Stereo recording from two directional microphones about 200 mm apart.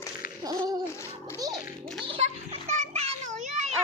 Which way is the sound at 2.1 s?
30° right (ahead or behind).